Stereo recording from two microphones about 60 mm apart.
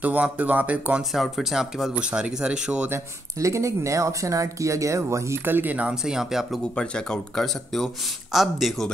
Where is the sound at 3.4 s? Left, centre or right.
Right.